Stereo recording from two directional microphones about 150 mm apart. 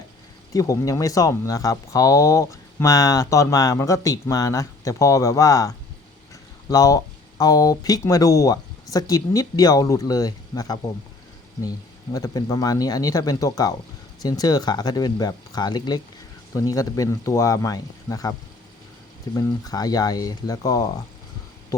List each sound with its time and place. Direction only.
0.5 s speech: 25° left (ahead or behind)
12.1 s speech: 25° left (ahead or behind)